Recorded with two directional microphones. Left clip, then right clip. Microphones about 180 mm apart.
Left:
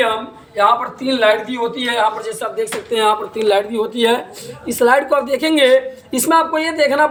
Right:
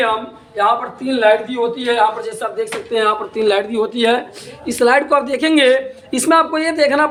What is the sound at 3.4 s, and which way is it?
A woman's voice, 25° right (ahead or behind).